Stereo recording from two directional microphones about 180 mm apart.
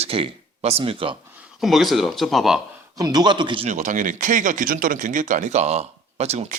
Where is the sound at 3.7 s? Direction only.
40° right (ahead or behind).